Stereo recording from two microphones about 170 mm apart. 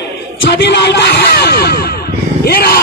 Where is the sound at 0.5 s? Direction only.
90° left.